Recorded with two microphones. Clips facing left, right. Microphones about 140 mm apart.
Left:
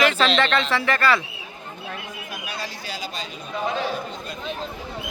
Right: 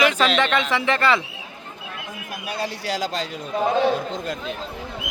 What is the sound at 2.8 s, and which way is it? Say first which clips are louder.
Speech: right 8 dB; 90° right.